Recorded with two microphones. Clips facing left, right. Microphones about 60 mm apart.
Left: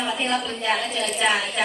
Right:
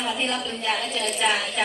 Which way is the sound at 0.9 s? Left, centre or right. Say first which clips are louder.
Left 1 dB; centre.